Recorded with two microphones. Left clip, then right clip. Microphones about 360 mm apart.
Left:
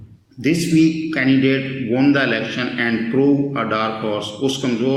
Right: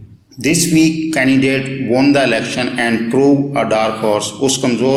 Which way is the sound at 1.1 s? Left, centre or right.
Centre.